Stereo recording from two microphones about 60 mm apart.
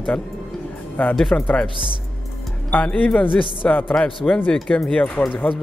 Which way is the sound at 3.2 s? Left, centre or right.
Left.